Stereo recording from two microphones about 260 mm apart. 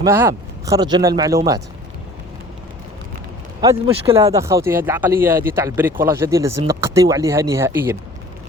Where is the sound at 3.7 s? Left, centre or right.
Right.